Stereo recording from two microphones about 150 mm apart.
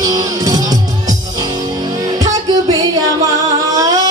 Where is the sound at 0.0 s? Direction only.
25° right (ahead or behind).